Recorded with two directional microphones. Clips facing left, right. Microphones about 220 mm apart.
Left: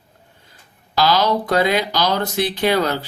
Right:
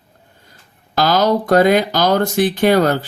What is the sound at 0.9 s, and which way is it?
Speech, 45° right (ahead or behind).